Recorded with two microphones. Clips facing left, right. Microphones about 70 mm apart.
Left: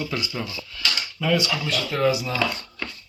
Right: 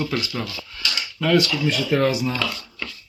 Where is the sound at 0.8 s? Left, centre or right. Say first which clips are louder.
Left 1 dB; left.